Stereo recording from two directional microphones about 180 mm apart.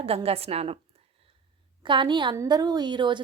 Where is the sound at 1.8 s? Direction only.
25° right (ahead or behind).